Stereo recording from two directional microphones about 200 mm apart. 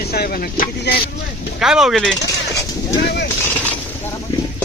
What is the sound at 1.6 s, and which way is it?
Speech, 5° right (ahead or behind).